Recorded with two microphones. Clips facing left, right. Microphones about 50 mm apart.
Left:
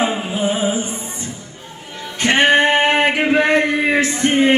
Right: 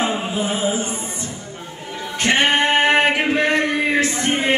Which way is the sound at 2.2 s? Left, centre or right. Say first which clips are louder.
Left 4 dB; left.